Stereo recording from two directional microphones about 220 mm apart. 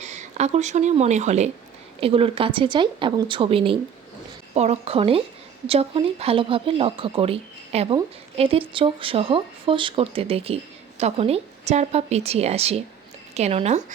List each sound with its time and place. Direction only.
0.0 s speech: 30° right (ahead or behind)